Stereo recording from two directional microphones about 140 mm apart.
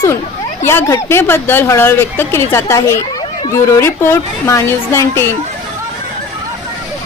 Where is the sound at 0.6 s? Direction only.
20° left (ahead or behind).